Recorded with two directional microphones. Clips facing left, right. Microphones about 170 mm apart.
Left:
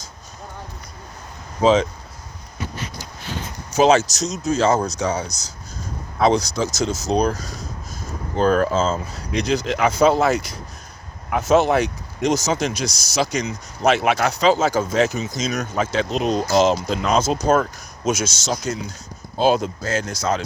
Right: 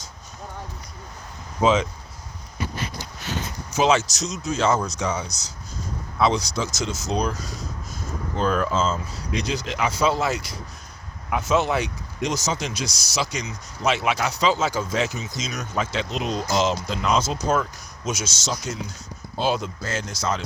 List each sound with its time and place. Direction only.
1.6 s speech: 35° left (ahead or behind)
3.8 s speech: 40° left (ahead or behind)